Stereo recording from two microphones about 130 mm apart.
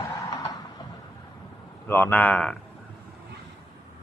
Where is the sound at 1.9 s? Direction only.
15° left (ahead or behind).